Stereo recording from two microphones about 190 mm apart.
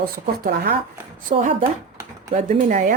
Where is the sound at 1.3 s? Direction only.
40° right (ahead or behind).